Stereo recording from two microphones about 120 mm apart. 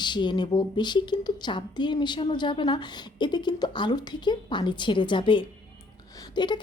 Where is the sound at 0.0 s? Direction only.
40° left (ahead or behind).